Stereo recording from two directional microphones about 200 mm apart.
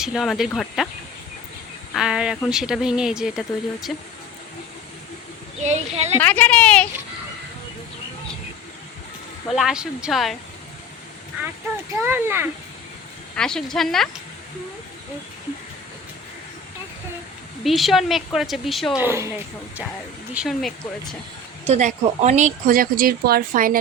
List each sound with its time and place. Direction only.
0.0 s a woman's voice: centre (ahead or behind)
1.9 s a woman's voice: centre (ahead or behind)
5.6 s speech: 35° right (ahead or behind)
6.1 s a woman's voice: 10° left (ahead or behind)
9.5 s a woman's voice: centre (ahead or behind)
11.9 s speech: 10° right (ahead or behind)
13.3 s a woman's voice: 5° left (ahead or behind)
17.6 s a woman's voice: centre (ahead or behind)
19.0 s speech: 15° right (ahead or behind)
20.3 s a woman's voice: centre (ahead or behind)
21.7 s speech: 35° right (ahead or behind)